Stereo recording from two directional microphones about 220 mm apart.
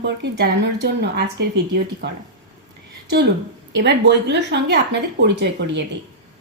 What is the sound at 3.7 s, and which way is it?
A woman's voice, 55° right (ahead or behind).